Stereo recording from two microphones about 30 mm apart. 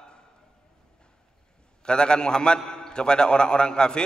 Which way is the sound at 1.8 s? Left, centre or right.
Left.